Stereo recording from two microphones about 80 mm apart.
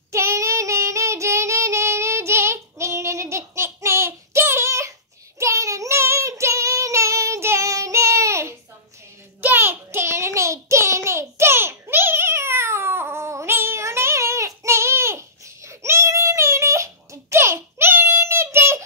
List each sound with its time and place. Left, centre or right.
0.1 s child singing: right
9.4 s child singing: right